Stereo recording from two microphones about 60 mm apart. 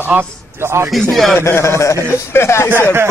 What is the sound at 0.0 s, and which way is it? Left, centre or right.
Speech, right.